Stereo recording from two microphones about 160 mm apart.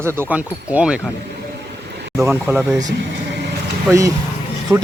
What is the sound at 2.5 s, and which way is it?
Speech, 10° right (ahead or behind).